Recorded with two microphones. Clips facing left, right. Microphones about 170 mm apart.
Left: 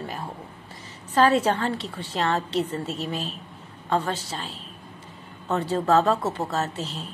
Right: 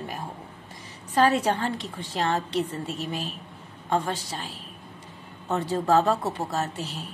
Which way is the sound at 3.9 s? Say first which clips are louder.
Left 1 dB; 15° right (ahead or behind).